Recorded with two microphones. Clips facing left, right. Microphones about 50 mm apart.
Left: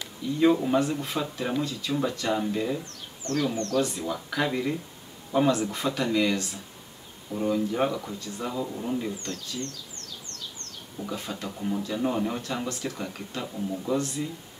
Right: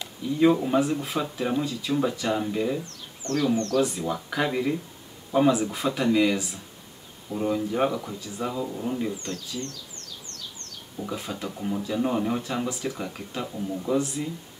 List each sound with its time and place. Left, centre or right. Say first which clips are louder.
0.4 s speech: right 1 dB; centre
3.2 s a man's voice: right 1 dB; right
3.8 s speech: right 3 dB; centre
9.1 s speech: right 2 dB; right
11.0 s speech: right 2 dB; centre